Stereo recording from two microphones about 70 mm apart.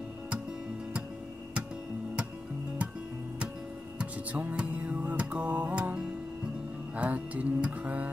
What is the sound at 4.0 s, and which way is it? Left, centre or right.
Music, centre.